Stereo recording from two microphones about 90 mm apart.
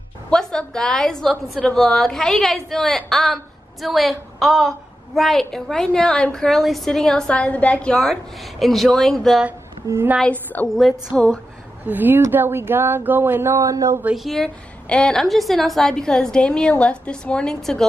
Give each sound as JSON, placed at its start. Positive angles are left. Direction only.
{"t": 0.3, "sound": "a woman's voice", "side_deg": 10}
{"t": 10.2, "sound": "a woman's voice", "side_deg": 20}
{"t": 10.8, "sound": "a woman's voice", "side_deg": -5}
{"t": 11.8, "sound": "speech", "side_deg": -20}
{"t": 14.1, "sound": "a woman's voice", "side_deg": 0}